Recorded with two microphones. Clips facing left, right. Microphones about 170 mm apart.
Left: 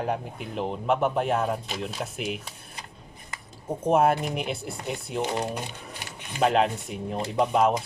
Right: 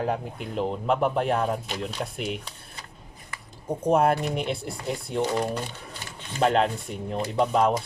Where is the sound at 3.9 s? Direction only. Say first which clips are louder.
Even; 5° left (ahead or behind).